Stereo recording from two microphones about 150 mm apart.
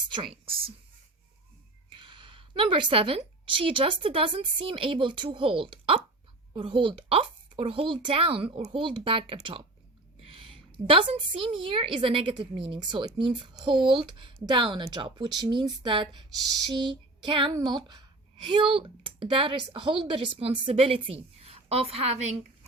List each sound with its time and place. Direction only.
0.1 s speech: 35° right (ahead or behind)
1.9 s a woman's voice: 35° right (ahead or behind)
16.7 s female singing: 30° right (ahead or behind)
17.5 s speech: 30° right (ahead or behind)